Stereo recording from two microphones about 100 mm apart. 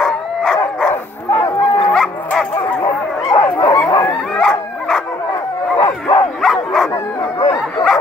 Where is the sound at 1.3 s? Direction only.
40° left (ahead or behind).